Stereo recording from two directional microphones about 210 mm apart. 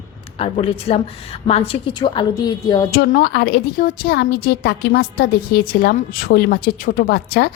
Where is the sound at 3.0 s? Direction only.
50° left (ahead or behind).